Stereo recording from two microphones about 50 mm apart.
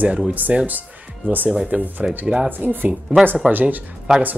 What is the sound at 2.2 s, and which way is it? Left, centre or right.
Speech, centre.